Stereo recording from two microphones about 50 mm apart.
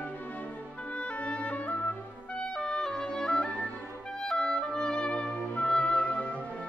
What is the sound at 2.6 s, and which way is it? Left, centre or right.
Music, centre.